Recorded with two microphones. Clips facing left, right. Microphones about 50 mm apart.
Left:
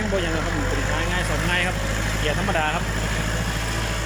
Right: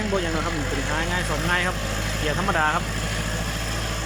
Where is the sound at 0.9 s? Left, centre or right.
Centre.